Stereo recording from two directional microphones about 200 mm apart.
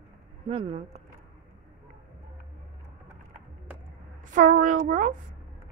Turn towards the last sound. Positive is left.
turn(degrees=-40)  # may be behind; listen again after turning